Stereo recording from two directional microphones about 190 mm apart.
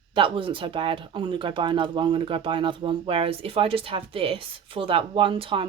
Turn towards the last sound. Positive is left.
turn(degrees=-30)  # may be behind; listen again after turning